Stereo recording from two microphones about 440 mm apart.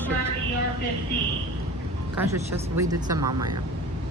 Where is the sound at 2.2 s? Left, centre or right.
Centre.